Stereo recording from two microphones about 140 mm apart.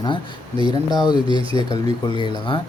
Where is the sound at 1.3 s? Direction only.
40° right (ahead or behind).